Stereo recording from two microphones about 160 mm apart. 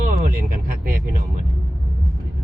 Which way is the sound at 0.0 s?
55° right (ahead or behind).